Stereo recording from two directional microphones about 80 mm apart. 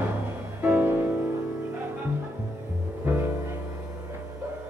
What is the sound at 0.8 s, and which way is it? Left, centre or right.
Music, right.